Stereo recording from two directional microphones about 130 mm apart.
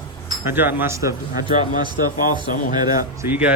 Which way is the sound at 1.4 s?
35° right (ahead or behind).